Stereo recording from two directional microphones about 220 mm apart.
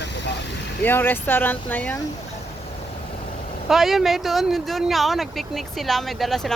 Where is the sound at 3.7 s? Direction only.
Centre (ahead or behind).